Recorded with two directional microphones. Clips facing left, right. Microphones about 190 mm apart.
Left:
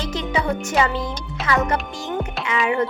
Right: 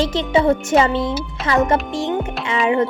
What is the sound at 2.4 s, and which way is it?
Music, 25° right (ahead or behind).